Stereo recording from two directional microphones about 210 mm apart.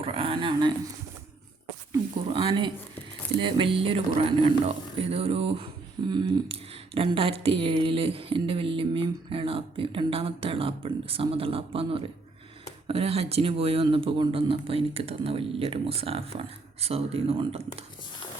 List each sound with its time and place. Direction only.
0.0 s speech: 25° right (ahead or behind)
1.9 s speech: 25° right (ahead or behind)